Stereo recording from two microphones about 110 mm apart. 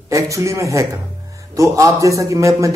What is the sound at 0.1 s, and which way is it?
A man's voice, 30° right (ahead or behind).